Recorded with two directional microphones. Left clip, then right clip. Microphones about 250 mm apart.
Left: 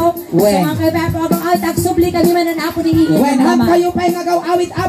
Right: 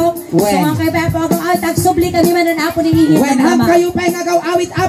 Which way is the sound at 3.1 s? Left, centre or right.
Right.